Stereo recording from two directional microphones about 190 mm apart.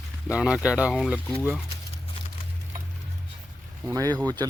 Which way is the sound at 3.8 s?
15° right (ahead or behind).